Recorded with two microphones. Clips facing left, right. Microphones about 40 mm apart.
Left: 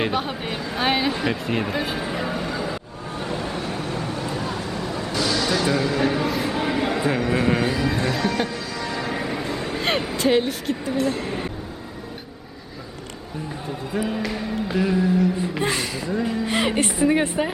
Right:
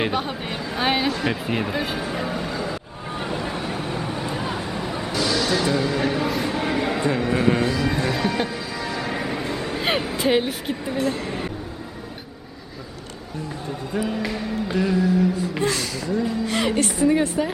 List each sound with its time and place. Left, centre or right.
0.0 s speech: centre
2.0 s a sound: centre
3.2 s vehicle: centre
5.1 s speech: centre
7.6 s speech: centre
7.9 s music: centre
11.0 s speech: centre
13.9 s speech: centre
15.6 s speech: left